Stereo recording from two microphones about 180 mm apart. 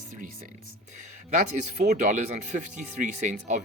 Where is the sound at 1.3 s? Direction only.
40° right (ahead or behind).